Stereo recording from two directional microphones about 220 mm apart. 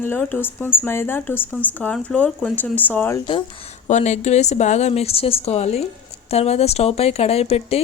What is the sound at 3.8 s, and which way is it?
Speech, 30° left (ahead or behind).